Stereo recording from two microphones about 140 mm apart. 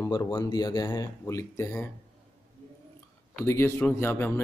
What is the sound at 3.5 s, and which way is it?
Speech, 20° left (ahead or behind).